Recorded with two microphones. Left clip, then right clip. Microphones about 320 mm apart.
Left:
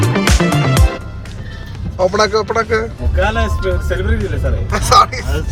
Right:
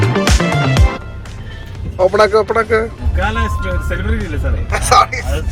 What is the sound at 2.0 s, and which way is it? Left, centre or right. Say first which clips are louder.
Speech: right 3 dB; centre.